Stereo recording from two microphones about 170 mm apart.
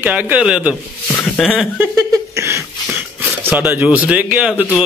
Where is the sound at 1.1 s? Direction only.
10° left (ahead or behind).